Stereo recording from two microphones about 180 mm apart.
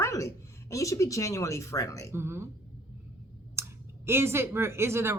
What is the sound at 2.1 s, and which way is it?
Speech, 15° right (ahead or behind).